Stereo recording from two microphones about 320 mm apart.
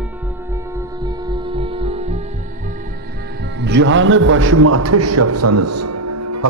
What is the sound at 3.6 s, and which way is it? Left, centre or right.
A man's voice, right.